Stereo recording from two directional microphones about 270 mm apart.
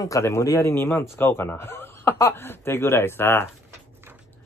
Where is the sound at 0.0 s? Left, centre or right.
Centre.